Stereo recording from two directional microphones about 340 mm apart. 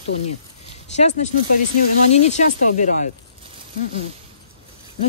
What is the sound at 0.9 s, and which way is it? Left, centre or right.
Speech, centre.